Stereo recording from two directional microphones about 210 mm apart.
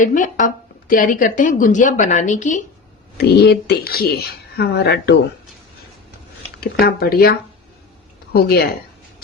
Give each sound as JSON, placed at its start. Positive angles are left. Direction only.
{"t": 0.0, "sound": "speech", "side_deg": 40}
{"t": 3.2, "sound": "speech", "side_deg": 50}
{"t": 6.6, "sound": "speech", "side_deg": 45}